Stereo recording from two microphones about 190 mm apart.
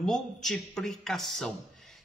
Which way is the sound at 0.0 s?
Centre (ahead or behind).